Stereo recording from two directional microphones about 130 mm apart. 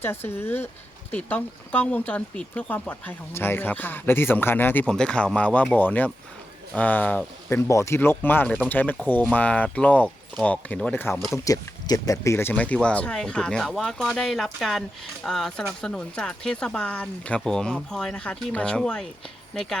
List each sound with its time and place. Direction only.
0.3 s speech: 15° left (ahead or behind)
11.4 s speech: 25° left (ahead or behind); by 19.0 s 5° left (ahead or behind)